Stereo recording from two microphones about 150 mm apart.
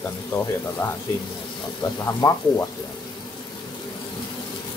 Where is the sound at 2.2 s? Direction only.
25° left (ahead or behind).